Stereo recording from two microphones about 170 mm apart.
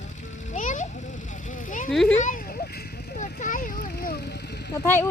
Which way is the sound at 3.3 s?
50° left (ahead or behind).